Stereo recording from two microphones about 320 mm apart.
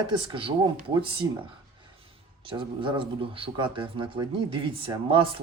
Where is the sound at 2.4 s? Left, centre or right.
Centre.